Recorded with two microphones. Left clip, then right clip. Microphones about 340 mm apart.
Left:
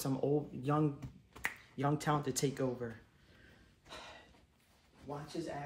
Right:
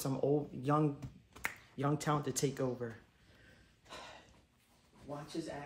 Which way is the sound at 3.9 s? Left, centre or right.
Centre.